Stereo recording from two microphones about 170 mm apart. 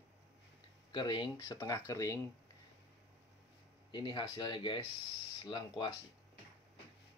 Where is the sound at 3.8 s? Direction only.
25° left (ahead or behind).